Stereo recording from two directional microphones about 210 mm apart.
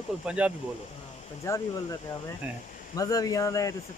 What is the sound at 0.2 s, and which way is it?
Speech, 5° right (ahead or behind).